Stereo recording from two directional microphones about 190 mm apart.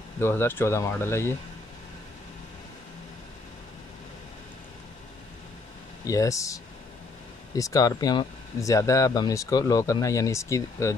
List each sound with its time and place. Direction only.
0.2 s speech: 10° left (ahead or behind)
6.0 s speech: 15° left (ahead or behind)